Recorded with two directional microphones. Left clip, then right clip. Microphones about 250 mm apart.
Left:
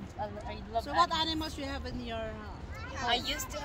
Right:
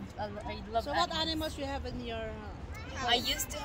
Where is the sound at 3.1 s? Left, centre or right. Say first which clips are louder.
Right 2 dB; centre.